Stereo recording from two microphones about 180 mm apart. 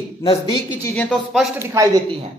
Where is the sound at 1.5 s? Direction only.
15° right (ahead or behind).